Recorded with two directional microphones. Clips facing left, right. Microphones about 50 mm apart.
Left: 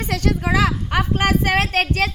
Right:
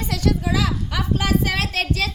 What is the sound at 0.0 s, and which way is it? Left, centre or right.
A woman's voice, left.